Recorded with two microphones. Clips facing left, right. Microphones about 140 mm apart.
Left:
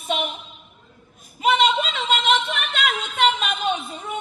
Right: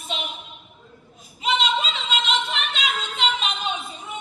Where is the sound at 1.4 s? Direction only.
55° left (ahead or behind).